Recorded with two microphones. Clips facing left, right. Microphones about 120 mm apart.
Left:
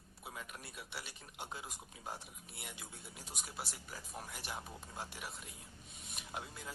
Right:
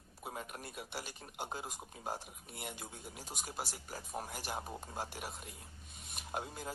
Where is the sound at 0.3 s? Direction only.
45° right (ahead or behind).